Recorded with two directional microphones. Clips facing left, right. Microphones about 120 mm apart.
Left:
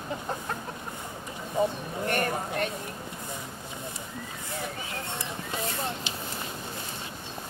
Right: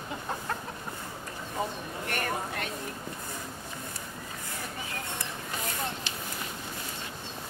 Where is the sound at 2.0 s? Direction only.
35° left (ahead or behind).